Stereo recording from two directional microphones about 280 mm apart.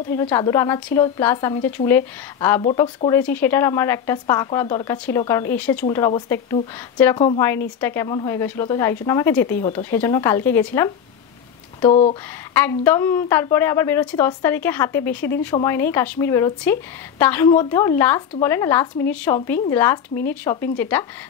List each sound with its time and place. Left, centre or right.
0.1 s a woman's voice: centre
2.6 s a woman's voice: centre
11.8 s speech: left
12.5 s a woman's voice: centre